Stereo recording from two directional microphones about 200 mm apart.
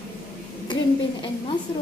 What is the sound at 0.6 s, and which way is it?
Speech, 20° left (ahead or behind).